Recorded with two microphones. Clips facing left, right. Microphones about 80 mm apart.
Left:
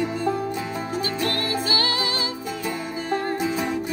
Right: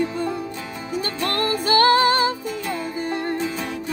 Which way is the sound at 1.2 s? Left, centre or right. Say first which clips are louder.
Right 2 dB; right.